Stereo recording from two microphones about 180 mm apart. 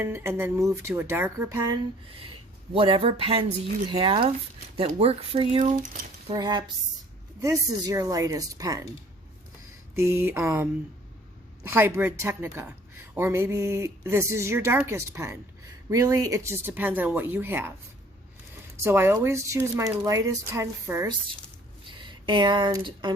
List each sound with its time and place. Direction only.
0.0 s a woman's voice: 15° right (ahead or behind)
2.7 s speech: 30° right (ahead or behind)
5.7 s speech: 50° right (ahead or behind)
6.2 s speech: 25° right (ahead or behind)
9.9 s a woman's voice: 15° right (ahead or behind)
18.8 s a woman's voice: 15° right (ahead or behind)